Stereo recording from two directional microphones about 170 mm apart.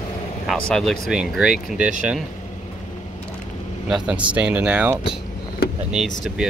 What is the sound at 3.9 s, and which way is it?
Speech, 5° right (ahead or behind).